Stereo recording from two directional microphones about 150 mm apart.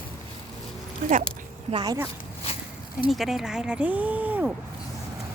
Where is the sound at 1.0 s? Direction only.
65° right (ahead or behind).